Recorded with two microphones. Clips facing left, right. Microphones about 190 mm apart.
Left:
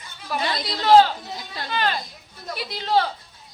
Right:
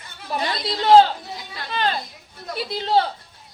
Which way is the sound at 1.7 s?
30° right (ahead or behind).